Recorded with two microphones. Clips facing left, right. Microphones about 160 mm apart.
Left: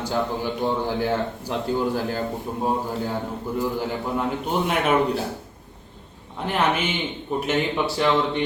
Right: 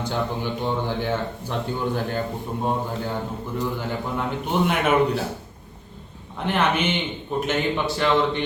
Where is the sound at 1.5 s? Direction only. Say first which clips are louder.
Left 2 dB; 5° left (ahead or behind).